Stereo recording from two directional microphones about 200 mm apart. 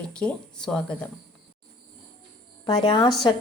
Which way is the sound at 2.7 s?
20° left (ahead or behind).